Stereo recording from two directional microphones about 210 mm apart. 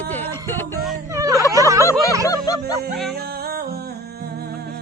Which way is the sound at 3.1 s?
50° right (ahead or behind).